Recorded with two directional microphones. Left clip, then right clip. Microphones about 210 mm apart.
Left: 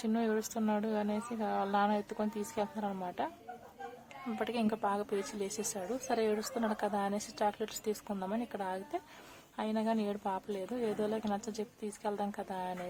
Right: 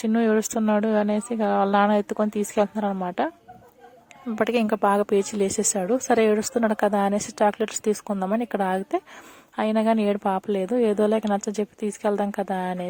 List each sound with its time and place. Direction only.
0.0 s a woman's voice: 35° right (ahead or behind)
4.4 s a woman's voice: 35° right (ahead or behind)